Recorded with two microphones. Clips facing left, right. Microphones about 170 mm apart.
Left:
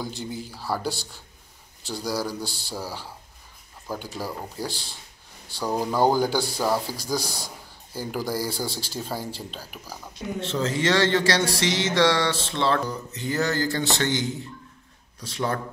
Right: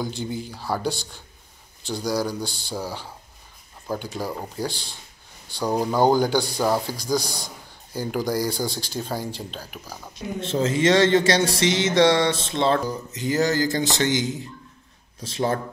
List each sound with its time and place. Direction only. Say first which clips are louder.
0.0 s a man's voice: right 4 dB; centre (ahead or behind)
10.4 s speech: right 4 dB; 20° right (ahead or behind)